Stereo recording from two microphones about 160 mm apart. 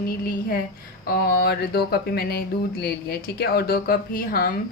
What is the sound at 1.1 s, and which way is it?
A woman's voice, 70° left (ahead or behind).